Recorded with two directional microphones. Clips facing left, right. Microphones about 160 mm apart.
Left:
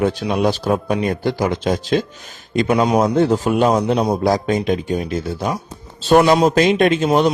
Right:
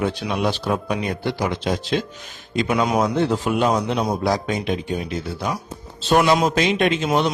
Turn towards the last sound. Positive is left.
turn(degrees=45)  # may be behind; listen again after turning